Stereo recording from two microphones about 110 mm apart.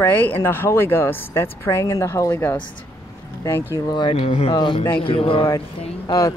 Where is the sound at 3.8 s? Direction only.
45° left (ahead or behind).